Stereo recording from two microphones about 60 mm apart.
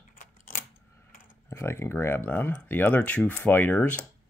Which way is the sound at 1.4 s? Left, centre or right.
Left.